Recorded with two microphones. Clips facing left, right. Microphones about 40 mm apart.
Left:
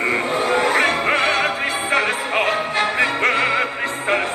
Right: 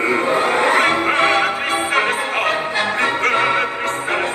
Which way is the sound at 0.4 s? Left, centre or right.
Right.